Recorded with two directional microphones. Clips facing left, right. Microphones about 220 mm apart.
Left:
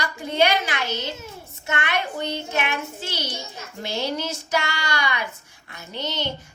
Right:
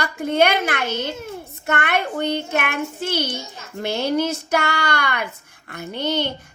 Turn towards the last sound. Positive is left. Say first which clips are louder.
# right 7 dB
turn(degrees=-55)  # may be behind; listen again after turning